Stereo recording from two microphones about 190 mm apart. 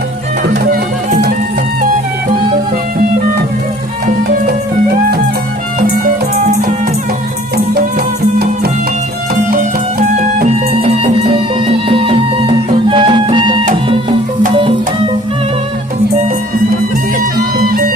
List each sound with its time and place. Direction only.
0.5 s music: 50° right (ahead or behind)
6.4 s music: 45° right (ahead or behind)
10.0 s music: 40° right (ahead or behind)
17.6 s music: 50° right (ahead or behind)